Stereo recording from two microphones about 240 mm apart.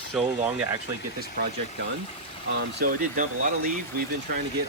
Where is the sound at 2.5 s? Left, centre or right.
Right.